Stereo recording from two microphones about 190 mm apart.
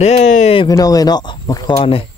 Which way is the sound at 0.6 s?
20° left (ahead or behind).